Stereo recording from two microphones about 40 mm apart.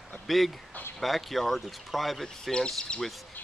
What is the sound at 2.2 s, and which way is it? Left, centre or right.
Speech, centre.